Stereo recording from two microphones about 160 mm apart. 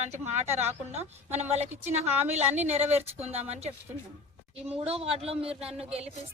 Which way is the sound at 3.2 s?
40° right (ahead or behind).